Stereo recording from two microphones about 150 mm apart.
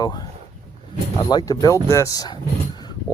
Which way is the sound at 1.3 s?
25° left (ahead or behind).